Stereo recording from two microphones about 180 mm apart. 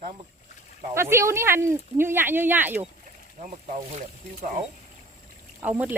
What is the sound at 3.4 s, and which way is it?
Speech, 40° right (ahead or behind).